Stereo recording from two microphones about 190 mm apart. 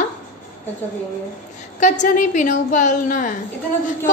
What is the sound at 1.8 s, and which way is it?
A woman's voice, 40° left (ahead or behind).